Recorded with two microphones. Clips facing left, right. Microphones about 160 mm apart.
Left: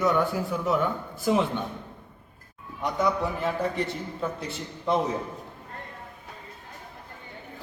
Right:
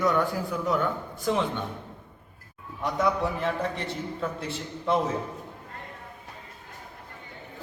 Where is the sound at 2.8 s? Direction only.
Centre (ahead or behind).